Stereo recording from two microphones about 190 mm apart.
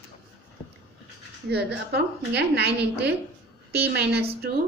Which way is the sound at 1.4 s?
60° right (ahead or behind).